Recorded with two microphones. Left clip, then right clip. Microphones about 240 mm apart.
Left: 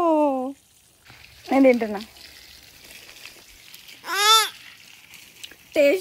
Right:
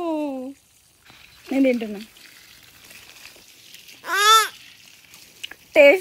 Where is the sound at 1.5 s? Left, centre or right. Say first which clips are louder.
Left 4 dB; left.